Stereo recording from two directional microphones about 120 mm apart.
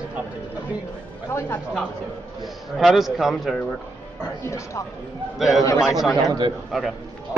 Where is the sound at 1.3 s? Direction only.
20° left (ahead or behind).